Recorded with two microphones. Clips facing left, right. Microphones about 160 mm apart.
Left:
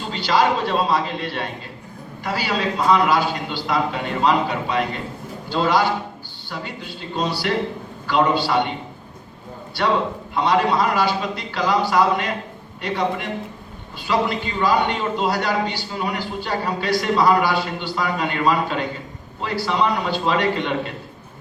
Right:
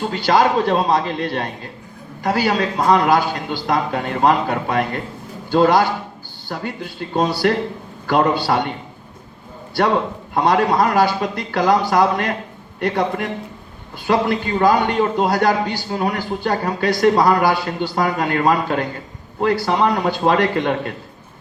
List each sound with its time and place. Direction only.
0.0 s a man's voice: 50° right (ahead or behind)
10.3 s a man's voice: 45° right (ahead or behind)